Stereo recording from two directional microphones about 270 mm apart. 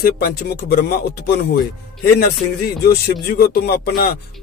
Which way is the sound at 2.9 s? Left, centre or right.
Left.